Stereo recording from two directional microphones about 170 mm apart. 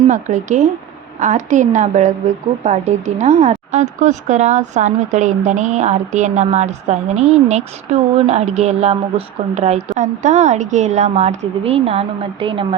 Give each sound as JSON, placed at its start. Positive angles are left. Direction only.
{"t": 0.1, "sound": "a woman's voice", "side_deg": -45}